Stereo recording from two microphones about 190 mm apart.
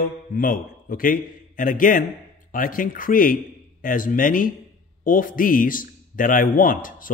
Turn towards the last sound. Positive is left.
turn(degrees=45)  # may be behind; listen again after turning